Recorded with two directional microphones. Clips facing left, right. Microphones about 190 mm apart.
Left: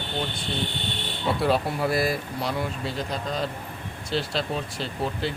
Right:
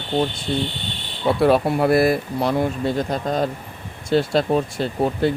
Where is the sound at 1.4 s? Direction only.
60° right (ahead or behind).